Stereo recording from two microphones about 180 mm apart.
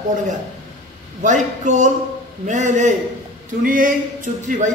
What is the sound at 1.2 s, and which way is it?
Speech, 40° right (ahead or behind).